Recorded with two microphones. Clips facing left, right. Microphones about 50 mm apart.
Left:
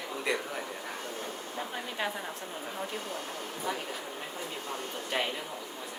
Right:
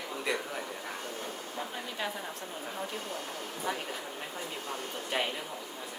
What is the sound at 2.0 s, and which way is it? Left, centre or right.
Speech, left.